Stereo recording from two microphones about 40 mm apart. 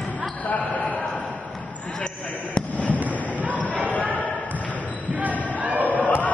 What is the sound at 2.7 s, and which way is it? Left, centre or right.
Fireworks, left.